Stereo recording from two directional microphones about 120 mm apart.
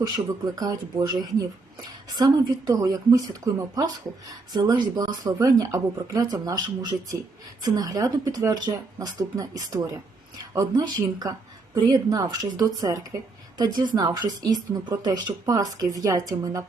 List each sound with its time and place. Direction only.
0.5 s speech: 35° right (ahead or behind)